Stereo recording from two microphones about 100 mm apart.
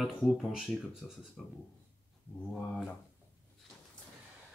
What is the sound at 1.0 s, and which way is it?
Speech, 5° left (ahead or behind).